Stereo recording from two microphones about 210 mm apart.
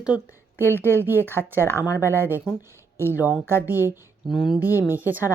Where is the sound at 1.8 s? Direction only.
15° left (ahead or behind).